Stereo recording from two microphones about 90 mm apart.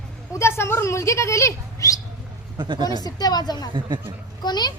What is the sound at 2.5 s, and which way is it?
Speech, 60° right (ahead or behind).